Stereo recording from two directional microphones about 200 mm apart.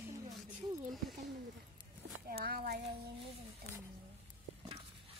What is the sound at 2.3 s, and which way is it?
Child singing, 50° right (ahead or behind).